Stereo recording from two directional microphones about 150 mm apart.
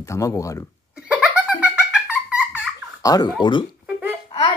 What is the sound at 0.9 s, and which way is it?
Giggle, 5° right (ahead or behind).